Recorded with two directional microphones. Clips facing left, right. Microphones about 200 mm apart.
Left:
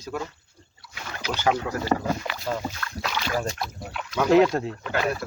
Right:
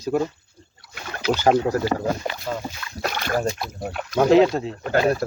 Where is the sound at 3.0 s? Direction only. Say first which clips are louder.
Right 4 dB; 50° right (ahead or behind).